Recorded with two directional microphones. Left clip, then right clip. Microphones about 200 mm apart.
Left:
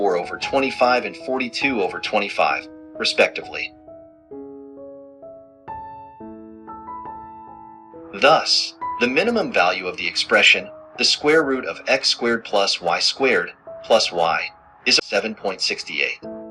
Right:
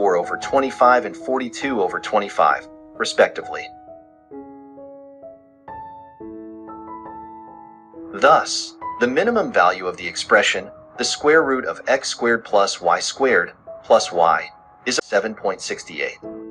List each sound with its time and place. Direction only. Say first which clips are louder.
0.0 s speech: right 2 dB; 20° left (ahead or behind)
8.1 s speech: right 1 dB; 20° left (ahead or behind)